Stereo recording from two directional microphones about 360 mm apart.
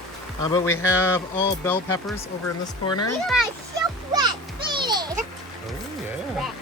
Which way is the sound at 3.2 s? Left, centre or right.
Centre.